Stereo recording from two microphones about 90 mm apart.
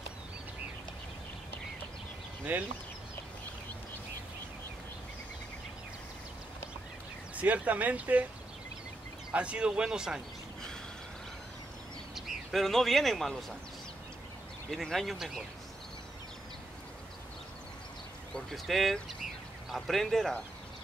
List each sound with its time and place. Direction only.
2.5 s speech: 20° right (ahead or behind)
7.3 s speech: 15° right (ahead or behind)
9.3 s speech: 15° right (ahead or behind)
12.3 s a man's voice: centre (ahead or behind)
14.7 s speech: 5° left (ahead or behind)
18.3 s speech: 5° left (ahead or behind)